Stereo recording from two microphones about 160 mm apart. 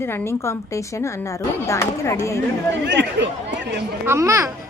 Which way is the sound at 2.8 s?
90° right.